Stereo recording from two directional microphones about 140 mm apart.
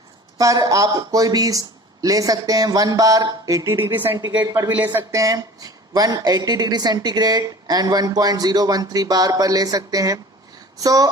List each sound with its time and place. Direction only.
0.3 s speech: 25° right (ahead or behind)
4.4 s speech: 25° right (ahead or behind)
4.7 s speech: 15° right (ahead or behind)